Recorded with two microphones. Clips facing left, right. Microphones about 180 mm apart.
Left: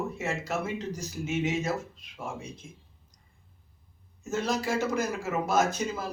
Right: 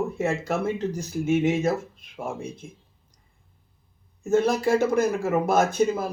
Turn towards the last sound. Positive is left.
turn(degrees=-55)  # may be behind; listen again after turning